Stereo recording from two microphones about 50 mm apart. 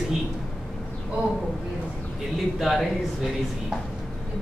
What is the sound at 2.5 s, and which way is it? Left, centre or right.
Speech, centre.